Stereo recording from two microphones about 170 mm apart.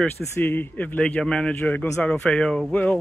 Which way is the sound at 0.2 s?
15° left (ahead or behind).